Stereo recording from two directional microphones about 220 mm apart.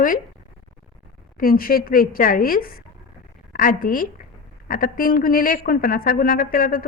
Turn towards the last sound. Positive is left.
turn(degrees=40)  # may be behind; listen again after turning